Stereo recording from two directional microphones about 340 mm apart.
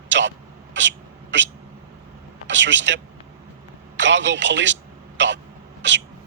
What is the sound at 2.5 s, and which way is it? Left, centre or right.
A man's voice, right.